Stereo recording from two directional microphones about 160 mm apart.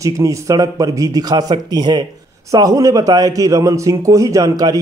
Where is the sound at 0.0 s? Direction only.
20° right (ahead or behind).